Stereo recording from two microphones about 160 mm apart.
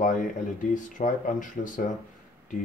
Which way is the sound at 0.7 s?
55° left (ahead or behind).